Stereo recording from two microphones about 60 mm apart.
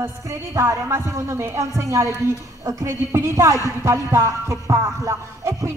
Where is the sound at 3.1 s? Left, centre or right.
Right.